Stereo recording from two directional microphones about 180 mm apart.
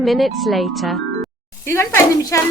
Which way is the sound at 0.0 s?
Centre (ahead or behind).